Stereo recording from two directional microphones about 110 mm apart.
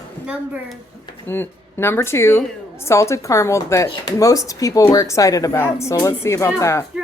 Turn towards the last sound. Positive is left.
turn(degrees=25)  # may be behind; listen again after turning